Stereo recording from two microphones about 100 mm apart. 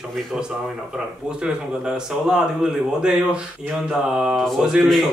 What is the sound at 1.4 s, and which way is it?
Speech, 10° right (ahead or behind).